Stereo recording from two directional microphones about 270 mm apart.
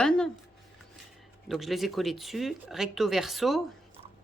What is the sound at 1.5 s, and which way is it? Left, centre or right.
Speech, centre.